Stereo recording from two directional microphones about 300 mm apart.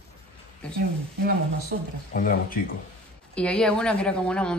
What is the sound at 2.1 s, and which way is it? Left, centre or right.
Speech, left.